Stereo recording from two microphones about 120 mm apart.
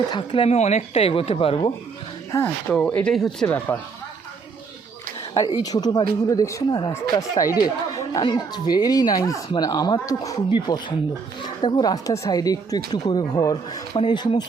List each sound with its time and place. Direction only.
0.1 s speech: 45° left (ahead or behind)
0.5 s speech: 65° left (ahead or behind); by 1.7 s 50° left (ahead or behind)
2.6 s speech: 10° left (ahead or behind)
5.3 s speech: 40° left (ahead or behind)
13.9 s speech: 45° left (ahead or behind)